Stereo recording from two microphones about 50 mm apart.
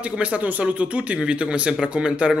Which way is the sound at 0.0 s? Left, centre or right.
Right.